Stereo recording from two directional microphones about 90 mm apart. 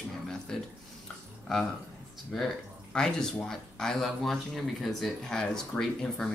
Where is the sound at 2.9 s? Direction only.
5° left (ahead or behind).